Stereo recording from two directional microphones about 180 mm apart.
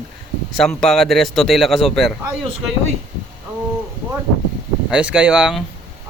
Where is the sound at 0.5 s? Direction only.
Centre (ahead or behind).